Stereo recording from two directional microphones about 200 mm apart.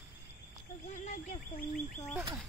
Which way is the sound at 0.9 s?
40° left (ahead or behind).